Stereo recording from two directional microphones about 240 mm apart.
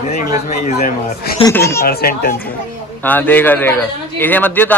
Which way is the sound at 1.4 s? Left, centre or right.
Centre.